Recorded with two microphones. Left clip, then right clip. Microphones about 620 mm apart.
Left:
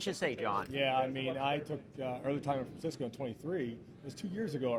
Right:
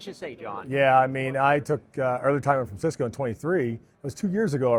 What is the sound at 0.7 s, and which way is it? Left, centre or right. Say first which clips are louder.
Speech: right 17 dB; right.